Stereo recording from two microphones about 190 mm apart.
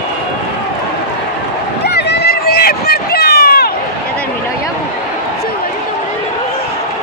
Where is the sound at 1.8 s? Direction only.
60° left (ahead or behind).